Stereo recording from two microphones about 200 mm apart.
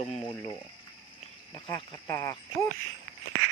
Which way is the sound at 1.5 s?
25° left (ahead or behind).